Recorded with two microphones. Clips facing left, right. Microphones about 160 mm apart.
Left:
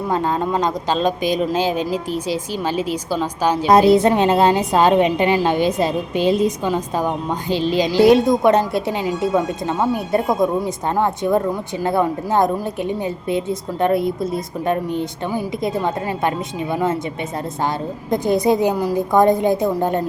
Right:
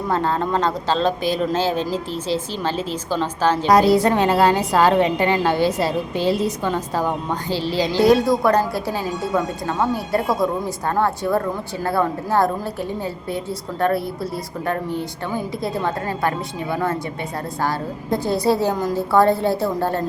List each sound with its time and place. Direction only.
0.1 s speech: 15° left (ahead or behind)
3.7 s a woman's voice: 25° left (ahead or behind)